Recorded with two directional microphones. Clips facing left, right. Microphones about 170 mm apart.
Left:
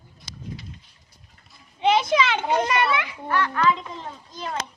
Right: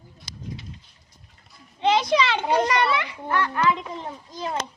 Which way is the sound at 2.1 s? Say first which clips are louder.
Even; centre (ahead or behind).